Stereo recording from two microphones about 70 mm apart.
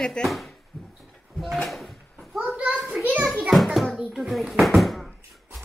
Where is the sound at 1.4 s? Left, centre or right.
Centre.